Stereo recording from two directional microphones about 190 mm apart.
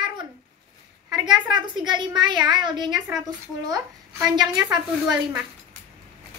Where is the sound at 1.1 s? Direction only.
20° right (ahead or behind).